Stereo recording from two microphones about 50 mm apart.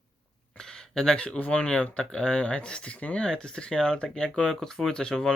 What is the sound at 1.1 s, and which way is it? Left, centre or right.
Speech, left.